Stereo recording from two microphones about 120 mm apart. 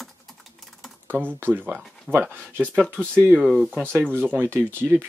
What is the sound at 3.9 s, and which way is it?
Speech, 15° right (ahead or behind).